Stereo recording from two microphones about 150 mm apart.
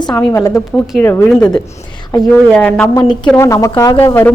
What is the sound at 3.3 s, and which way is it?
Speech, 20° left (ahead or behind).